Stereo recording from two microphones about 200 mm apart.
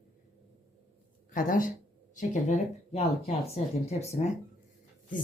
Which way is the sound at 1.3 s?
45° left (ahead or behind).